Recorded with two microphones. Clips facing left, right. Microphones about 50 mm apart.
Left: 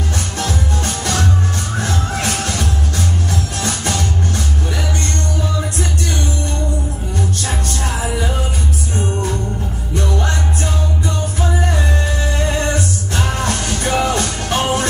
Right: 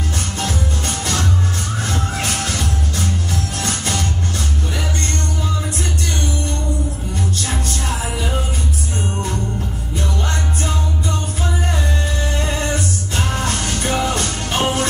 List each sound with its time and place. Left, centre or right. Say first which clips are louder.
0.4 s music: left 2 dB; left
12.4 s music: left 3 dB; left